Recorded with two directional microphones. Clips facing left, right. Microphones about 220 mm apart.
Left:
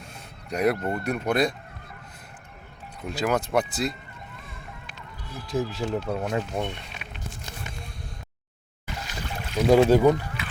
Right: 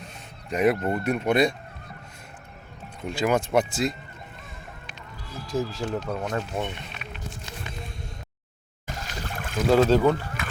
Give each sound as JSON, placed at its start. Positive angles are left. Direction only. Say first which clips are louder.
{"t": 0.5, "sound": "speech", "louder": "right 2 dB", "side_deg": 0}
{"t": 3.0, "sound": "speech", "louder": "right 2 dB", "side_deg": 5}
{"t": 5.5, "sound": "speech", "louder": "left 1 dB", "side_deg": 15}
{"t": 8.9, "sound": "boat", "louder": "even", "side_deg": -45}
{"t": 9.6, "sound": "speech", "louder": "left 2 dB", "side_deg": 15}
{"t": 10.4, "sound": "rowboat", "louder": "right 2 dB", "side_deg": -45}